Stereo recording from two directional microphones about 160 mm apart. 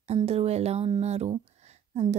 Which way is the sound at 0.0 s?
40° right (ahead or behind).